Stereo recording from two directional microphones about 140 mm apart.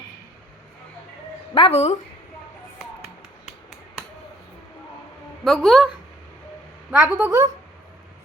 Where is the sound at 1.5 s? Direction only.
45° left (ahead or behind).